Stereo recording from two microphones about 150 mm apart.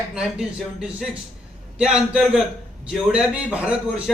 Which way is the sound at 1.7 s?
5° right (ahead or behind).